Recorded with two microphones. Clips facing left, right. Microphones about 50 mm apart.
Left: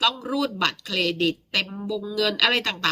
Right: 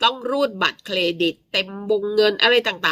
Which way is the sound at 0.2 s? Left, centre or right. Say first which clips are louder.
Right 4 dB; centre.